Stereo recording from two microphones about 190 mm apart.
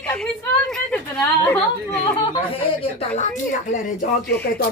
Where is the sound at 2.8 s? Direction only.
35° left (ahead or behind).